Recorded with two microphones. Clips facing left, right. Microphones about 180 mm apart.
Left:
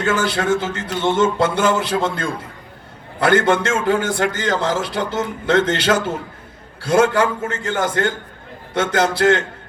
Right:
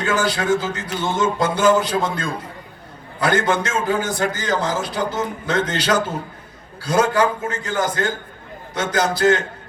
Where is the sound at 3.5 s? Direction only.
25° left (ahead or behind).